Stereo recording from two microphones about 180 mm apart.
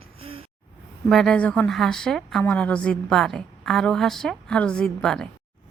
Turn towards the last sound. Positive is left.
turn(degrees=5)  # may be behind; listen again after turning